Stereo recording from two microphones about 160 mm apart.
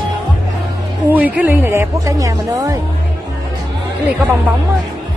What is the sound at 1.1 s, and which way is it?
Speech, 10° right (ahead or behind).